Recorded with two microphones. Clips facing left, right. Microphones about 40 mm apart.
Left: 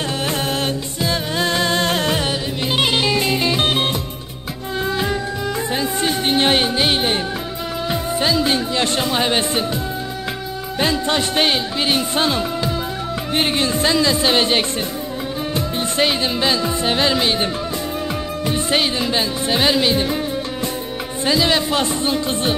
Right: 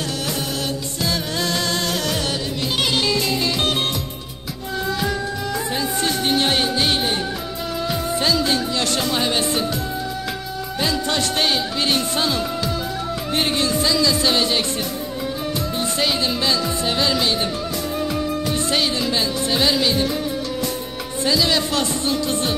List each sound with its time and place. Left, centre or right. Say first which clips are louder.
0.3 s music: left 4 dB; left
1.0 s music: left 3 dB; left
5.7 s music: left 2 dB; left
7.9 s speech: left 2 dB; centre
10.8 s speech: left 3 dB; left
12.2 s music: left 3 dB; left
13.3 s speech: left 2 dB; left
15.5 s music: left 5 dB; left
18.5 s speech: left 5 dB; left
21.2 s speech: left 2 dB; left